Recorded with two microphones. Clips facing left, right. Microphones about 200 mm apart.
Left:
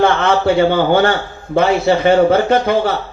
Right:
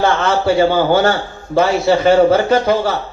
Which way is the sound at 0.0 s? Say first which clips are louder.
Left 2 dB; 55° left (ahead or behind).